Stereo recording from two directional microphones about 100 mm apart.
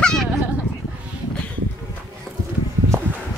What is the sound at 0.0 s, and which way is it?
Dog, 5° left (ahead or behind).